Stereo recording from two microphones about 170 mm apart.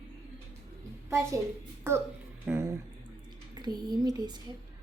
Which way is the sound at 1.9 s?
15° right (ahead or behind).